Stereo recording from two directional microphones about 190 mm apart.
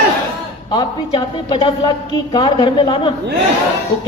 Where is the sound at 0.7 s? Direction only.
25° left (ahead or behind).